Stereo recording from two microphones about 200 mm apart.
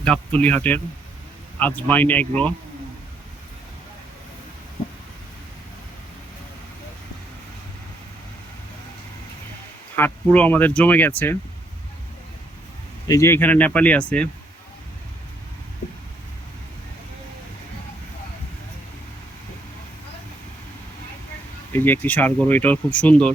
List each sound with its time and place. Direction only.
0.0 s speech: 5° left (ahead or behind)
9.9 s speech: 10° left (ahead or behind)
13.1 s speech: 15° left (ahead or behind)
21.7 s speech: 10° left (ahead or behind)